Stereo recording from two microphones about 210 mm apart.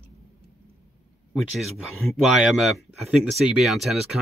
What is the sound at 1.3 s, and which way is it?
Speech, centre (ahead or behind).